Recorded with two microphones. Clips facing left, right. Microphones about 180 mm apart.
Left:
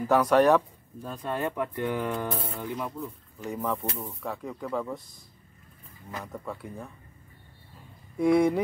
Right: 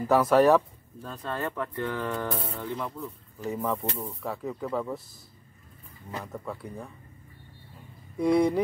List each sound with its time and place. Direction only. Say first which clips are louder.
0.0 s speech: right 1 dB; centre (ahead or behind)
1.0 s speech: left 2 dB; 15° left (ahead or behind)
3.4 s speech: right 1 dB; centre (ahead or behind)
6.2 s speech: even; centre (ahead or behind)
8.2 s speech: left 1 dB; centre (ahead or behind)